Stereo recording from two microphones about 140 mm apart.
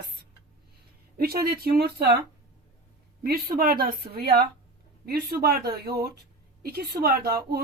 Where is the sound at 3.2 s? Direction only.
90° right.